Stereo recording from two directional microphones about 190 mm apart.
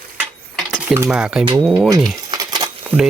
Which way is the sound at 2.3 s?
20° right (ahead or behind).